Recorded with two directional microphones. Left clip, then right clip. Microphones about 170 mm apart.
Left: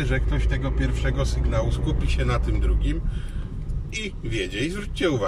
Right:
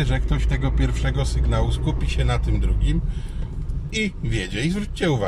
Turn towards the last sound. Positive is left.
turn(degrees=-25)  # may be behind; listen again after turning